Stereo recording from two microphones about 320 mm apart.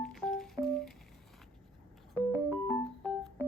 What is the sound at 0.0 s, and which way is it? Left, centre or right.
Music, centre.